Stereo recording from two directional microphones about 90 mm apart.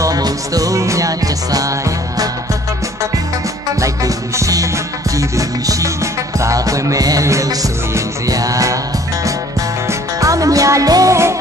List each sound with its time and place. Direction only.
0.0 s music: 40° right (ahead or behind)
3.8 s music: 40° right (ahead or behind)
6.4 s music: 40° right (ahead or behind)
9.8 s music: 35° right (ahead or behind)